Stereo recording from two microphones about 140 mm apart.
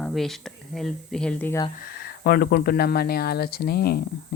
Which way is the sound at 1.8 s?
90° left.